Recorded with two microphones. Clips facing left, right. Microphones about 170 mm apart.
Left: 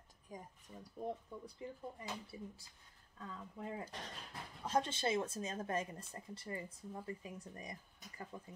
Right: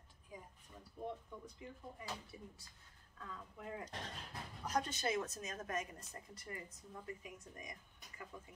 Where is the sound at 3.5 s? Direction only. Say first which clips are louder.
Left 2 dB; 30° left (ahead or behind).